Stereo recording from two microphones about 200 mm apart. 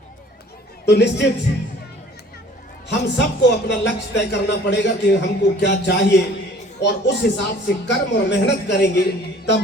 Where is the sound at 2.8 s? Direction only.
60° left (ahead or behind).